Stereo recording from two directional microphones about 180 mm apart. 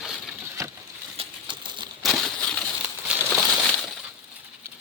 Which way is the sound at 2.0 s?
Centre (ahead or behind).